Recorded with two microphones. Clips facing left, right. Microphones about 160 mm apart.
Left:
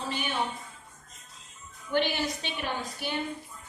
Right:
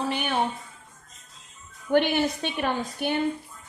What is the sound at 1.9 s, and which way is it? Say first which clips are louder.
A woman's voice: right 6 dB; 60° right (ahead or behind).